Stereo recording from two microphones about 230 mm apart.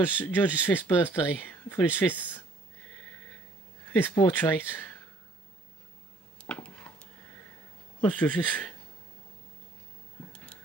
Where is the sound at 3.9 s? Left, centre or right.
Centre.